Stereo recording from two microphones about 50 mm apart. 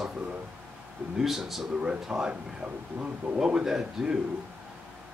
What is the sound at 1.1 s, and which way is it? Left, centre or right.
Speech, centre.